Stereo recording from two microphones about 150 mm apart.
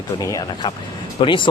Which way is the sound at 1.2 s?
35° left (ahead or behind).